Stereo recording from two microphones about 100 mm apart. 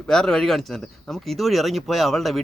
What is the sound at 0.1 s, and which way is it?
A man's voice, 5° left (ahead or behind).